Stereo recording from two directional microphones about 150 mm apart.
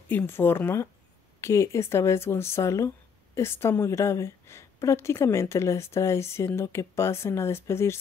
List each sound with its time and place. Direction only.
0.1 s a woman's voice: 15° left (ahead or behind)